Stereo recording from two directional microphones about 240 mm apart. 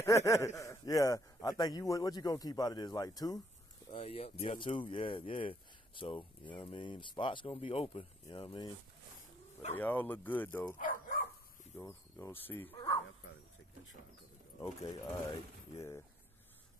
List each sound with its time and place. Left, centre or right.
0.0 s speech: centre
10.8 s speech: left
11.7 s speech: centre
14.6 s speech: centre